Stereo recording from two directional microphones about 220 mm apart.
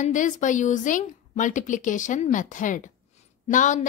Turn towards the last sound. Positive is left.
turn(degrees=35)  # may be behind; listen again after turning